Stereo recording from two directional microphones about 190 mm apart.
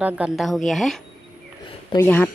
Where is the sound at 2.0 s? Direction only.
10° left (ahead or behind).